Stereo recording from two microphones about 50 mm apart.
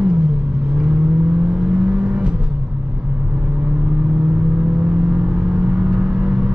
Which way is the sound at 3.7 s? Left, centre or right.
Right.